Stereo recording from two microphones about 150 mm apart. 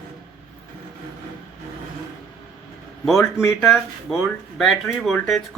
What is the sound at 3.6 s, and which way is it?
Speech, centre (ahead or behind).